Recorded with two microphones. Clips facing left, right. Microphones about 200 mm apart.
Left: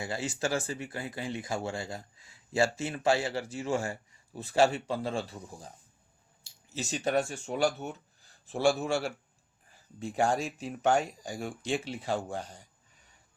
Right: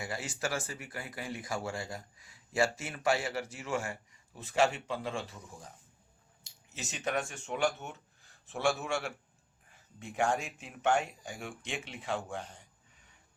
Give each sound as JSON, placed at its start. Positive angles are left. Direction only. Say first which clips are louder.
{"t": 0.0, "sound": "speech", "louder": "left 4 dB", "side_deg": 25}